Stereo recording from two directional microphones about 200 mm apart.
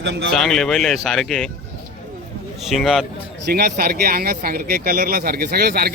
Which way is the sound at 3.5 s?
50° right (ahead or behind).